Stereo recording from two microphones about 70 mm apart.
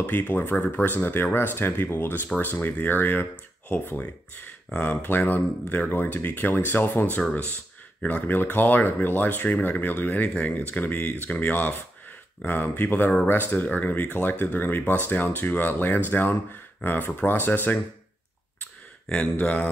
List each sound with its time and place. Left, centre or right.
0.0 s speech: left
19.0 s speech: centre